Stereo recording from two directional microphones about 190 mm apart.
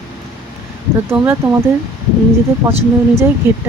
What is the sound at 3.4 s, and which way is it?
Speech, 10° right (ahead or behind).